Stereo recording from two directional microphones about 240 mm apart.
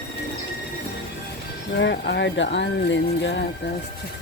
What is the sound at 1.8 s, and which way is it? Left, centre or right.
Speech, left.